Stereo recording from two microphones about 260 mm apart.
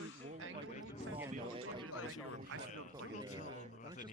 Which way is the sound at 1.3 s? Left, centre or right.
Right.